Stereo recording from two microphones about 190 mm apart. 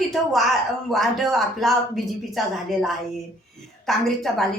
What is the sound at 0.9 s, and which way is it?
A woman's voice, centre (ahead or behind).